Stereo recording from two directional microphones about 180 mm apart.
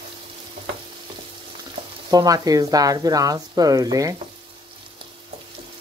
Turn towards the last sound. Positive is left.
turn(degrees=-20)  # may be behind; listen again after turning